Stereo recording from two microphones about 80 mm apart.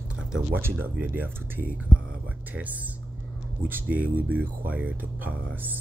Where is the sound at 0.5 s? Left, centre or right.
Right.